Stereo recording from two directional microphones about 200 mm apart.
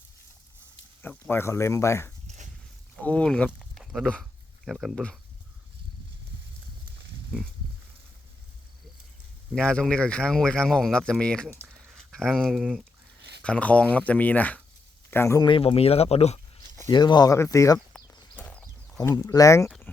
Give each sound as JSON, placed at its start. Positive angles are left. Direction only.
{"t": 1.3, "sound": "speech", "side_deg": 10}
{"t": 2.2, "sound": "horse", "side_deg": -35}
{"t": 2.9, "sound": "speech", "side_deg": 5}
{"t": 9.6, "sound": "speech", "side_deg": 5}
{"t": 13.4, "sound": "speech", "side_deg": 5}
{"t": 16.9, "sound": "speech", "side_deg": 20}
{"t": 18.3, "sound": "horse", "side_deg": 5}
{"t": 19.1, "sound": "speech", "side_deg": 15}